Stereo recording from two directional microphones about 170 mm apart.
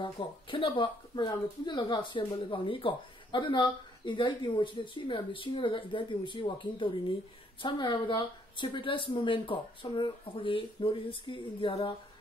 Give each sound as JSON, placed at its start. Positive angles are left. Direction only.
{"t": 0.0, "sound": "speech", "side_deg": 30}